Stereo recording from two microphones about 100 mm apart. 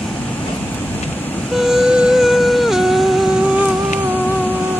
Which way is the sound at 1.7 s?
5° right (ahead or behind).